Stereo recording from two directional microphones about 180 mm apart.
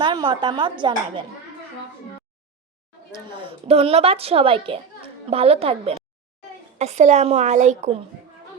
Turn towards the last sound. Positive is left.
turn(degrees=-40)  # may be behind; listen again after turning